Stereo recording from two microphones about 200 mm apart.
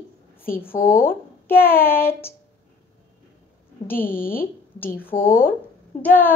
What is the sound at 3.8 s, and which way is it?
Speech, 10° left (ahead or behind).